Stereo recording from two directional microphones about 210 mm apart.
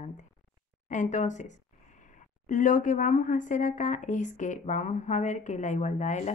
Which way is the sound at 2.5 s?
40° left (ahead or behind).